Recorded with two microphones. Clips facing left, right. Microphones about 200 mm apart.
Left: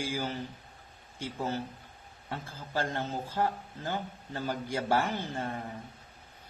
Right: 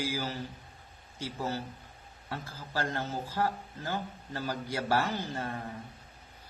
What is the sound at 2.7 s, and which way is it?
Speech, 15° left (ahead or behind).